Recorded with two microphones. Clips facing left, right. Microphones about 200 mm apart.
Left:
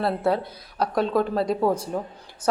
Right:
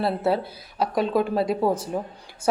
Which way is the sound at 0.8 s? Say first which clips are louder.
Even; 5° right (ahead or behind).